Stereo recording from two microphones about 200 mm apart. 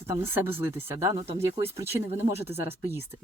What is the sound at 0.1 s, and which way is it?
Speech, 10° right (ahead or behind).